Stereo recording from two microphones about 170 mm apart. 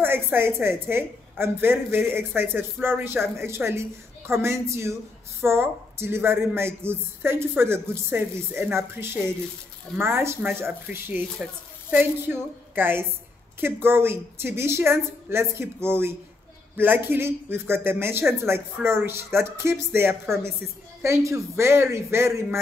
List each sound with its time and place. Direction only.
0.0 s a woman's voice: 15° right (ahead or behind)
12.3 s a woman's voice: 10° right (ahead or behind)